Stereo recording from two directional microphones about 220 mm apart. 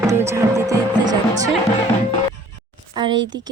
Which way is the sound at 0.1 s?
10° right (ahead or behind).